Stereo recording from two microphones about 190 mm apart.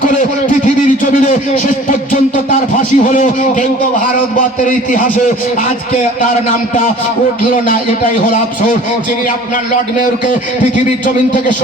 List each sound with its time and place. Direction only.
0.2 s a man's voice: 40° left (ahead or behind)
4.4 s a man's voice: 45° left (ahead or behind)